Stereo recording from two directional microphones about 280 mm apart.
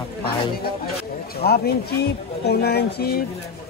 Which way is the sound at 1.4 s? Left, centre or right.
Left.